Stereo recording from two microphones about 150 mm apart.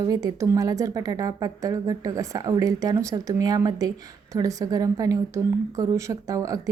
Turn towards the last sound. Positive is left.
turn(degrees=-20)  # may be behind; listen again after turning